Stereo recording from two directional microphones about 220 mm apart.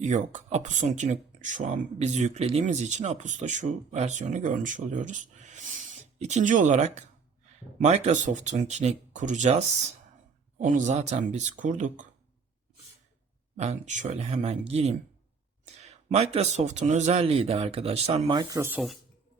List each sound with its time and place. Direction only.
0.0 s speech: 35° right (ahead or behind)
13.6 s a man's voice: 30° right (ahead or behind); by 18.9 s 5° right (ahead or behind)